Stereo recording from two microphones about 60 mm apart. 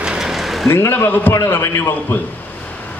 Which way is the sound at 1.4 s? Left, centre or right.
Left.